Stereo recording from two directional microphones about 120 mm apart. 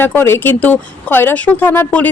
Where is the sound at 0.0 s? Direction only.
20° left (ahead or behind).